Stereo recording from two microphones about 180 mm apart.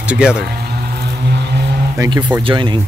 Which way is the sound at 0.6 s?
60° right (ahead or behind).